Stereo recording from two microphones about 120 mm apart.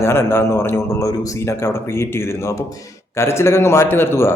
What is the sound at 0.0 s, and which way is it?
Speech, 20° left (ahead or behind).